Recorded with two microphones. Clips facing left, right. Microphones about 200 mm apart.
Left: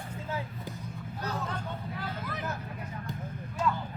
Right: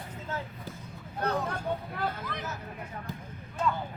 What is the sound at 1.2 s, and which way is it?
Speech, 55° right (ahead or behind).